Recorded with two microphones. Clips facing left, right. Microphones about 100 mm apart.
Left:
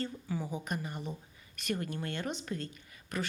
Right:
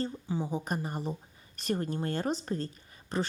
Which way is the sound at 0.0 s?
25° right (ahead or behind).